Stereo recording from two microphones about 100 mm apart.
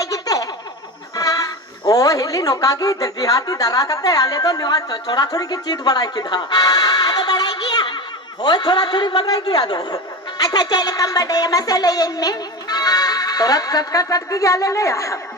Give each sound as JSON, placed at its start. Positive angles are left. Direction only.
{"t": 0.0, "sound": "a sound", "side_deg": 35}
{"t": 1.1, "sound": "music", "side_deg": 35}
{"t": 1.9, "sound": "a woman's voice", "side_deg": 35}